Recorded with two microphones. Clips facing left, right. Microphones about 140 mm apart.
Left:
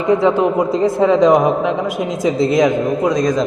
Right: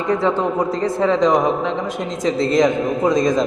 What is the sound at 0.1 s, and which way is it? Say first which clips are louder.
A man's voice: left 5 dB; 15° left (ahead or behind).